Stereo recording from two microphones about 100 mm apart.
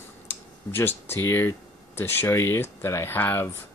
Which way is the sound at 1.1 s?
25° left (ahead or behind).